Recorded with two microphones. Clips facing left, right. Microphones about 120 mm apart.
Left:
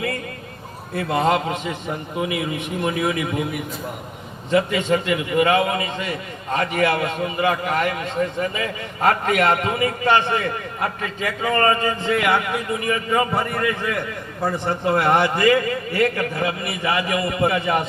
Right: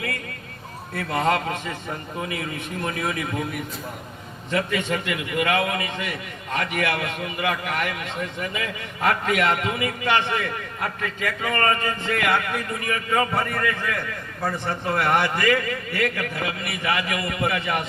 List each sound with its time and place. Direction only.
0.9 s a man's voice: 20° left (ahead or behind)
4.5 s a man's voice: 25° left (ahead or behind)